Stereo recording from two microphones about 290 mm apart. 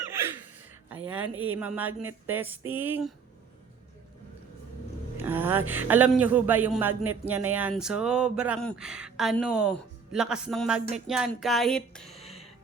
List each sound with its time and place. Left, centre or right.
1.2 s speech: right
1.5 s speech: centre
5.1 s speech: centre
12.1 s music: left